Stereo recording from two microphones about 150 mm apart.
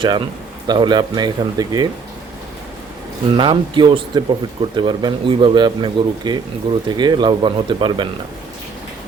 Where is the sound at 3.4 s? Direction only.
30° right (ahead or behind).